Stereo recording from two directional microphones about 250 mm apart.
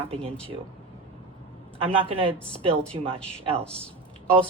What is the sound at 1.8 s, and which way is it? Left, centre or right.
Speech, right.